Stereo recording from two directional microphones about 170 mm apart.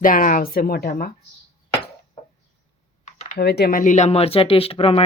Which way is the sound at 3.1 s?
45° left (ahead or behind).